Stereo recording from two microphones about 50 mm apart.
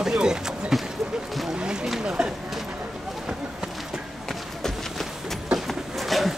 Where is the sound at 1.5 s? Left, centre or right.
Centre.